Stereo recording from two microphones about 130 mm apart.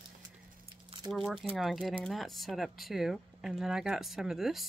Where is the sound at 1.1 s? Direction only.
Centre (ahead or behind).